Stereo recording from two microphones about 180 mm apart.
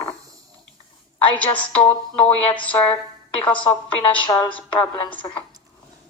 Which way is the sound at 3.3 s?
5° left (ahead or behind).